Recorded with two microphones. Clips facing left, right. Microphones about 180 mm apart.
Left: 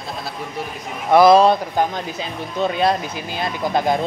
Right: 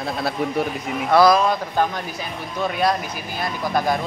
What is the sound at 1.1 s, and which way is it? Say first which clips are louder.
Speech: left 4 dB; 20° left (ahead or behind).